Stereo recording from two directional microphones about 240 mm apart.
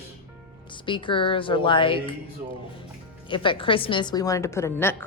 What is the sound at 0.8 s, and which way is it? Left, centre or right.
A woman's voice, left.